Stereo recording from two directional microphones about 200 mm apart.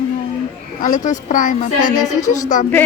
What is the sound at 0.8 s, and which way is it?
Speech, 40° left (ahead or behind).